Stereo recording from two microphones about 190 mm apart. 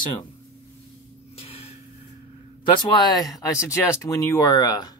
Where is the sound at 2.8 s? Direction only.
20° left (ahead or behind).